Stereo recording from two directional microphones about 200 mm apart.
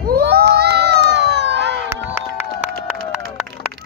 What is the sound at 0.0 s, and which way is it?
Crowd, 55° right (ahead or behind).